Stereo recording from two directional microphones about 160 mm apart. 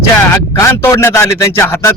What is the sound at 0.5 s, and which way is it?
A man's voice, 15° left (ahead or behind).